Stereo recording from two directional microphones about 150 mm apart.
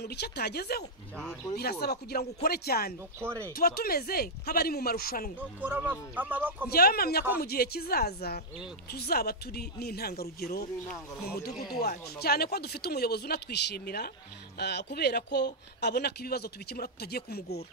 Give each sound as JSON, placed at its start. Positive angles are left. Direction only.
{"t": 0.0, "sound": "speech", "side_deg": 90}
{"t": 3.2, "sound": "speech", "side_deg": -15}
{"t": 3.5, "sound": "speech", "side_deg": 90}
{"t": 5.6, "sound": "speech", "side_deg": -10}
{"t": 6.7, "sound": "speech", "side_deg": 90}
{"t": 11.8, "sound": "speech", "side_deg": 90}